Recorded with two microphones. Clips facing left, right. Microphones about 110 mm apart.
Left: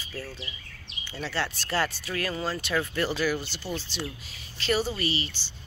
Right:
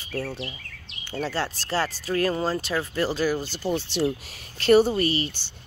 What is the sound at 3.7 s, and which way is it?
Speech, 70° right (ahead or behind).